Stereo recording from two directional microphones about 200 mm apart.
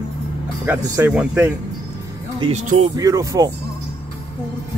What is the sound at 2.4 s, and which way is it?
Speech, 35° right (ahead or behind).